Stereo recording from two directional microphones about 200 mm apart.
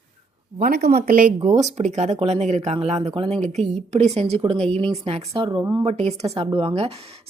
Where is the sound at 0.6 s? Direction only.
50° right (ahead or behind).